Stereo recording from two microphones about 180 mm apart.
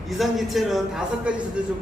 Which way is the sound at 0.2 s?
Centre (ahead or behind).